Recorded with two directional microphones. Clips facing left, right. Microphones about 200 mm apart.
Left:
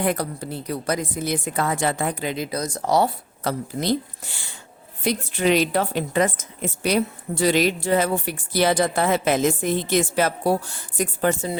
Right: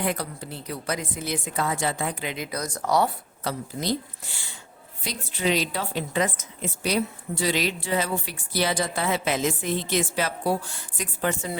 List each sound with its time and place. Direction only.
0.0 s a woman's voice: 45° left (ahead or behind)
2.3 s speech: 30° left (ahead or behind)
3.4 s speech: 60° left (ahead or behind)
5.0 s a woman's voice: 55° left (ahead or behind)